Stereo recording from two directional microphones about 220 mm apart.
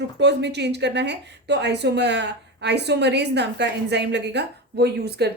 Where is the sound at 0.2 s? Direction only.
50° right (ahead or behind).